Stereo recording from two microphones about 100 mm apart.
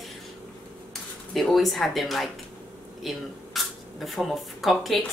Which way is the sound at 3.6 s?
Centre (ahead or behind).